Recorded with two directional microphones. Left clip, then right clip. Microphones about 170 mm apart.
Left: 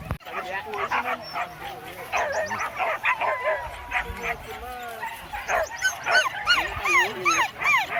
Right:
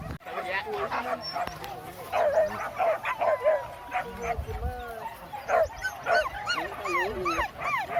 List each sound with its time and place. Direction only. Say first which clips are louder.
1.0 s speech: left 2 dB; 50° right (ahead or behind)
2.1 s frog: right 1 dB; 60° right (ahead or behind)
5.5 s dog: left 1 dB; 55° right (ahead or behind)